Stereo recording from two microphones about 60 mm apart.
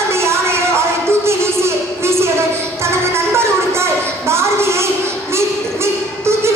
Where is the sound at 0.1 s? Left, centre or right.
Right.